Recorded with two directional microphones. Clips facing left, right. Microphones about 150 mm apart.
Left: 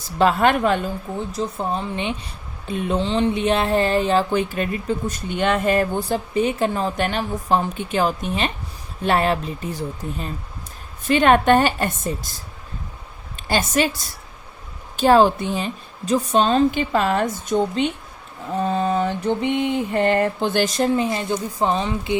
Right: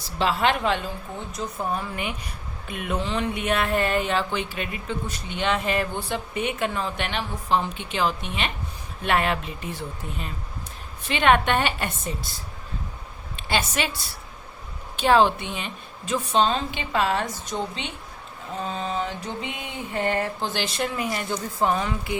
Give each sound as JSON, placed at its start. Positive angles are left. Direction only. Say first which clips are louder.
{"t": 0.2, "sound": "a woman's voice", "louder": "left 6 dB", "side_deg": 50}
{"t": 1.3, "sound": "speech", "louder": "left 3 dB", "side_deg": 30}
{"t": 13.3, "sound": "a woman's voice", "louder": "left 5 dB", "side_deg": 40}
{"t": 18.7, "sound": "mantra", "louder": "left 8 dB", "side_deg": 55}
{"t": 19.6, "sound": "a woman's voice", "louder": "left 4 dB", "side_deg": 65}